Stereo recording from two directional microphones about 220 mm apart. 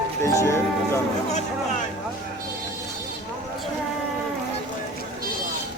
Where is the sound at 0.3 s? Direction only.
15° left (ahead or behind).